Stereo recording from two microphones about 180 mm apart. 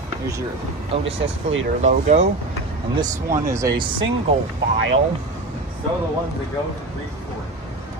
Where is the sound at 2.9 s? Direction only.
20° right (ahead or behind).